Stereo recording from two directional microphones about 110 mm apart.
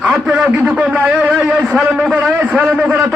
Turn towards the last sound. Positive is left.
turn(degrees=-15)  # may be behind; listen again after turning